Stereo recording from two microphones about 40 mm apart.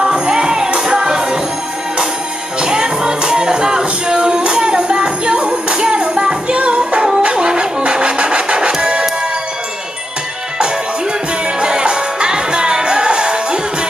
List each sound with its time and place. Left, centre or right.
0.0 s music: centre
2.6 s music: centre
6.9 s a sound: centre
11.6 s music: centre